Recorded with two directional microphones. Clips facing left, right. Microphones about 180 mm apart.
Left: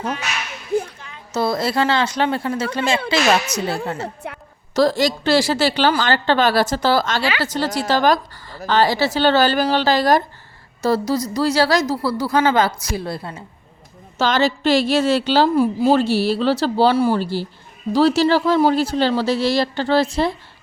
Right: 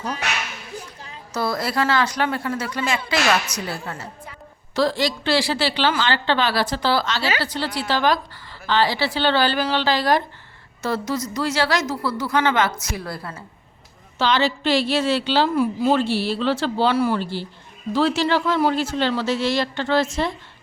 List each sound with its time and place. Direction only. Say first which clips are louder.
1.3 s speech: left 4 dB; 25° left (ahead or behind)
4.0 s a woman's voice: left 8 dB; 65° left (ahead or behind)
4.7 s a woman's voice: left 4 dB; 40° left (ahead or behind); by 13.4 s 25° left (ahead or behind)
14.2 s a woman's voice: left 2 dB; 45° left (ahead or behind)